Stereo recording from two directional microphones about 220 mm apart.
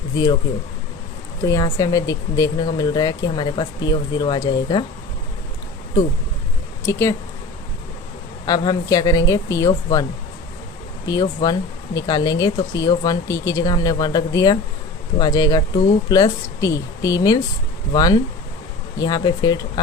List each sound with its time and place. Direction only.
1.4 s speech: 15° left (ahead or behind)
6.8 s speech: 10° left (ahead or behind)
8.4 s speech: 20° left (ahead or behind)